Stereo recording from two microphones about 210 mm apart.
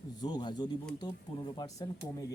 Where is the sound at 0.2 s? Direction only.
20° left (ahead or behind).